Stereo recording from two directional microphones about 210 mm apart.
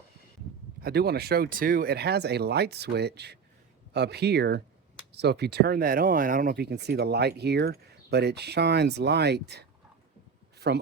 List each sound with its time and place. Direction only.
0.8 s speech: 50° right (ahead or behind)